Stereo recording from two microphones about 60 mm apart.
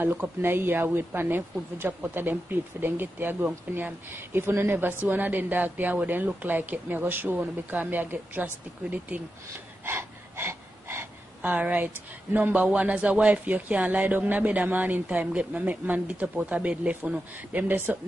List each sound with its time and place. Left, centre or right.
0.0 s speech: right
9.8 s a sound: right
11.4 s speech: right
12.7 s speech: right